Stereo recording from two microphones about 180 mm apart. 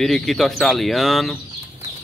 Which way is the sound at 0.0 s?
Centre (ahead or behind).